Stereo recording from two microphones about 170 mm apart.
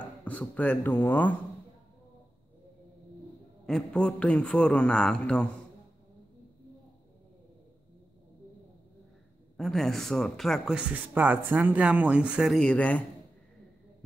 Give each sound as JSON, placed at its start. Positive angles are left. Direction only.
{"t": 0.0, "sound": "speech", "side_deg": 10}
{"t": 3.6, "sound": "speech", "side_deg": 5}
{"t": 9.6, "sound": "speech", "side_deg": 0}